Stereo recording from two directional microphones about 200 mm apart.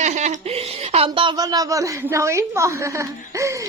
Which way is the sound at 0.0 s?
35° right (ahead or behind).